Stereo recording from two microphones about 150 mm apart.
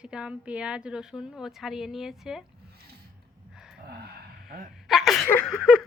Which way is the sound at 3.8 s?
90° right.